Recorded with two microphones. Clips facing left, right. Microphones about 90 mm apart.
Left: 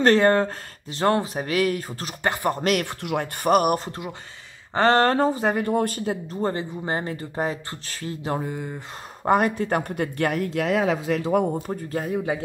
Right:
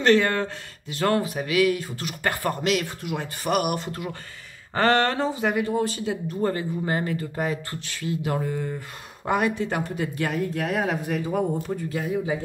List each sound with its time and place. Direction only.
0.0 s speech: 40° left (ahead or behind)
2.2 s speech: 20° left (ahead or behind)
2.6 s speech: 60° left (ahead or behind)
3.4 s speech: 40° left (ahead or behind)
4.7 s speech: 25° left (ahead or behind)
5.0 s speech: 45° left (ahead or behind)
5.7 s a man's voice: 50° left (ahead or behind)
6.2 s speech: 25° left (ahead or behind)
8.4 s speech: 15° left (ahead or behind)
9.2 s speech: 40° left (ahead or behind); by 11.4 s 80° left
11.6 s a man's voice: 45° left (ahead or behind)